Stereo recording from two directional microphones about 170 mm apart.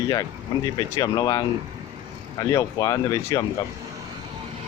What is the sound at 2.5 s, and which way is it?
Speech, 20° left (ahead or behind).